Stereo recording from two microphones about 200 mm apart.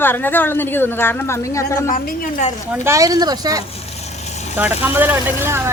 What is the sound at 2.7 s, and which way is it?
Speech, 15° right (ahead or behind).